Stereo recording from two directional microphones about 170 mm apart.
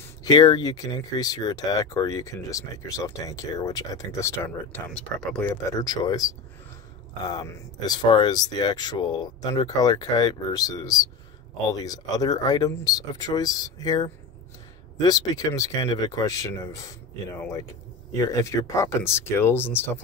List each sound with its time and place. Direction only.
0.2 s speech: 25° left (ahead or behind)
4.9 s speech: 5° left (ahead or behind)
5.5 s speech: 20° left (ahead or behind)